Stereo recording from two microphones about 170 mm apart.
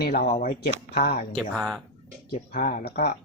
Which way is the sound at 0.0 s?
65° left (ahead or behind).